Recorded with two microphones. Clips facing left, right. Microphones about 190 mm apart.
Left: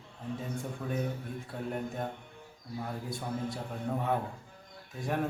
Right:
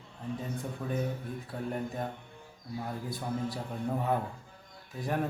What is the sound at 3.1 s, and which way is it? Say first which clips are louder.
A man's voice: right 2 dB; 5° right (ahead or behind).